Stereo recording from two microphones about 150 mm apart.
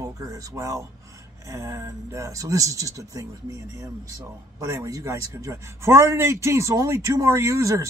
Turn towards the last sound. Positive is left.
turn(degrees=-20)  # may be behind; listen again after turning